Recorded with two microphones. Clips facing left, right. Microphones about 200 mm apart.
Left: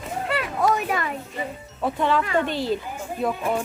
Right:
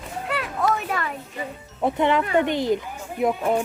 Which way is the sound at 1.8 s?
20° right (ahead or behind).